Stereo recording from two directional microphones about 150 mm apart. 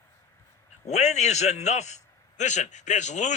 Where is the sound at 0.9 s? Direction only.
50° left (ahead or behind).